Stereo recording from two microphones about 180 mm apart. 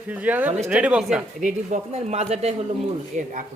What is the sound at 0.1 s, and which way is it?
Speech, 10° right (ahead or behind).